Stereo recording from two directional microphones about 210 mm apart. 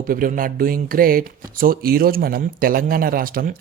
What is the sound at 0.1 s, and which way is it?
Speech, 40° right (ahead or behind).